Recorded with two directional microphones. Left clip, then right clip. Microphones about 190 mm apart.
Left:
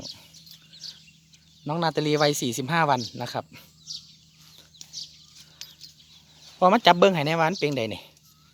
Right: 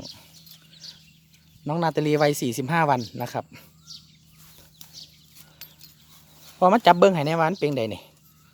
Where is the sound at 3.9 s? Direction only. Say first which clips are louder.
Left 6 dB; 25° left (ahead or behind).